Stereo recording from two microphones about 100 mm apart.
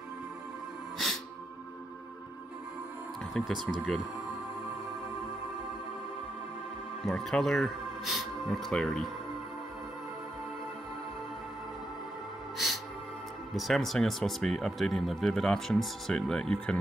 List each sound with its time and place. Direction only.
0.9 s music: centre (ahead or behind)
3.4 s speech: 5° left (ahead or behind)
7.1 s speech: 5° left (ahead or behind)
12.5 s music: centre (ahead or behind)
13.6 s speech: centre (ahead or behind)